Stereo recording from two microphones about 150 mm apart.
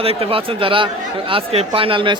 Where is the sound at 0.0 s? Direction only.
40° right (ahead or behind).